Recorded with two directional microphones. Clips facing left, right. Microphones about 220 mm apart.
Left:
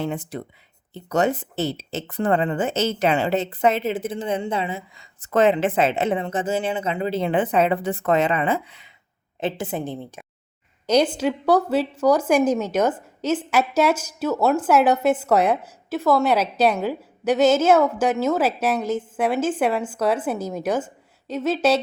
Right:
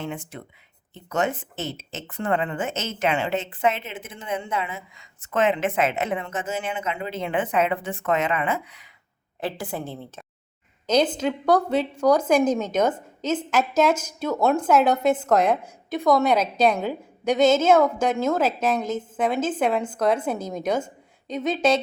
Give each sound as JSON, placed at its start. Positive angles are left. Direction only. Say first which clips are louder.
{"t": 0.0, "sound": "a woman's voice", "louder": "left 5 dB", "side_deg": 35}